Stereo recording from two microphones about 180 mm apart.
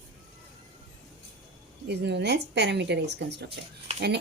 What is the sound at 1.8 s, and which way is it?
A woman's voice, 70° right (ahead or behind).